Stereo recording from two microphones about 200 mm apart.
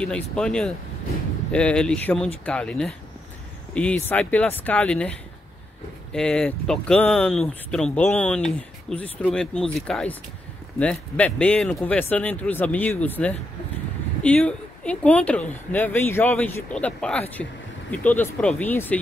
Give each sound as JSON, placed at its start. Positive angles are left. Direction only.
{"t": 0.0, "sound": "speech", "side_deg": 5}
{"t": 6.1, "sound": "speech", "side_deg": 5}